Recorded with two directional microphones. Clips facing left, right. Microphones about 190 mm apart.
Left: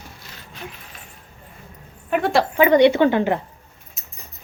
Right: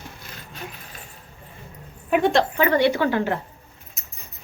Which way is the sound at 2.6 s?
20° left (ahead or behind).